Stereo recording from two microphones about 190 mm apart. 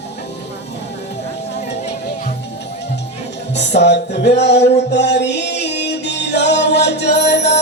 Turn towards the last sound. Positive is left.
turn(degrees=65)  # may be behind; listen again after turning